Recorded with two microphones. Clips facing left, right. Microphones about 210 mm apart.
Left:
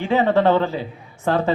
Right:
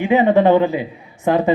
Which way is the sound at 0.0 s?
15° right (ahead or behind).